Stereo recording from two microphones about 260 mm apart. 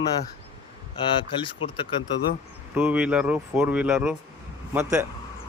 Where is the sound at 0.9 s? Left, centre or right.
Centre.